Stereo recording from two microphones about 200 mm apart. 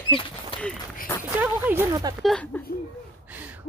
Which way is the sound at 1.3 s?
10° right (ahead or behind).